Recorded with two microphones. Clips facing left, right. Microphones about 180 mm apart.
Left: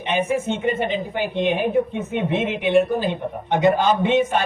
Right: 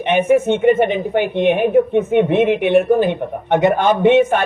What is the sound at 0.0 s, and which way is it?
Speech, 60° right (ahead or behind).